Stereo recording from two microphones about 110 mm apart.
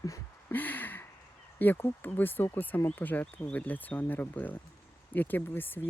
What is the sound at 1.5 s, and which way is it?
Speech, 15° left (ahead or behind).